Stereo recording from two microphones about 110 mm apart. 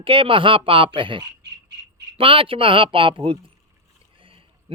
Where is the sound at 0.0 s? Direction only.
55° right (ahead or behind).